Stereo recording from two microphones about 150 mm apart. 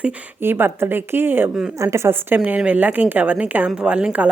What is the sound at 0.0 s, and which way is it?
A woman's voice, 15° right (ahead or behind).